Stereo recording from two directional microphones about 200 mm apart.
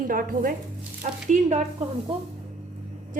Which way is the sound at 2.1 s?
25° right (ahead or behind).